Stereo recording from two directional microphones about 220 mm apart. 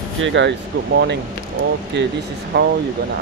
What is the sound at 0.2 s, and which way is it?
Speech, 55° right (ahead or behind).